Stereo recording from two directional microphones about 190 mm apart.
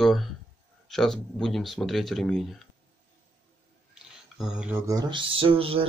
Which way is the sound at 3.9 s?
5° right (ahead or behind).